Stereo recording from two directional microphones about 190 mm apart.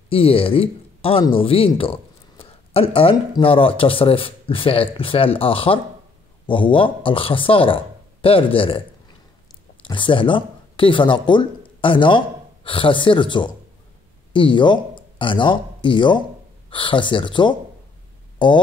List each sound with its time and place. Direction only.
0.1 s speech: 30° left (ahead or behind)
9.8 s speech: 25° left (ahead or behind)